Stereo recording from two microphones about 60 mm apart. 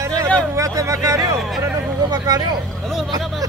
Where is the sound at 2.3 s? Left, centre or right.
Right.